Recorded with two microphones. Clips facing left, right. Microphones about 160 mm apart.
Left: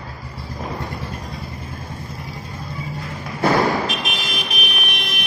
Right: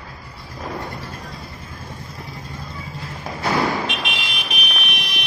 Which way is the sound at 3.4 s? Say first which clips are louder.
Left 4 dB; 45° left (ahead or behind).